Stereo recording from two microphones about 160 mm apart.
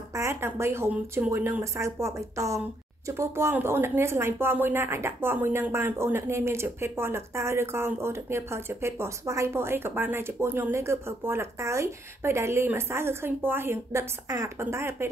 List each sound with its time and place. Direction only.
0.1 s speech: 15° right (ahead or behind)